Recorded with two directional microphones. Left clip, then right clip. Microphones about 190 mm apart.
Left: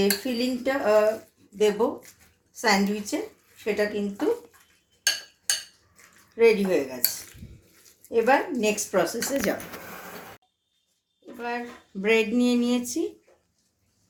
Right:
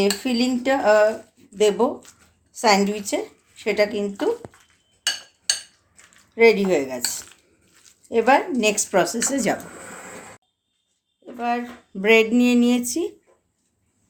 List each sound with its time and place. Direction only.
0.0 s speech: 60° right (ahead or behind)
6.3 s speech: 60° right (ahead or behind)
8.1 s speech: 60° right (ahead or behind)
11.3 s speech: 55° right (ahead or behind)